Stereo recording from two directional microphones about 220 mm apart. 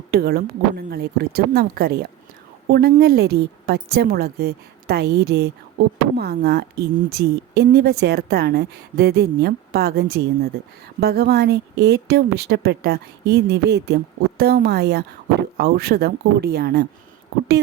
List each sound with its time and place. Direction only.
0.1 s a woman's voice: 45° right (ahead or behind)